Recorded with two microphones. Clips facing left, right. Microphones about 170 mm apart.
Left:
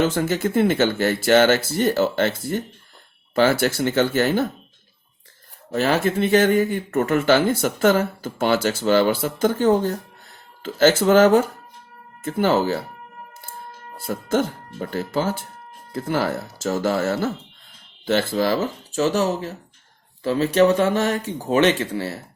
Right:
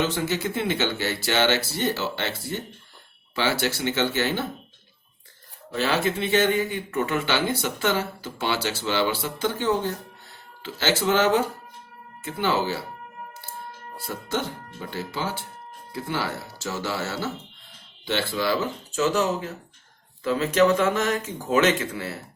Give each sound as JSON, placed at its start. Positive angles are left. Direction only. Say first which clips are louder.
{"t": 0.0, "sound": "speech", "louder": "left 5 dB", "side_deg": 50}
{"t": 5.7, "sound": "speech", "louder": "left 4 dB", "side_deg": 45}
{"t": 14.1, "sound": "speech", "louder": "left 7 dB", "side_deg": 50}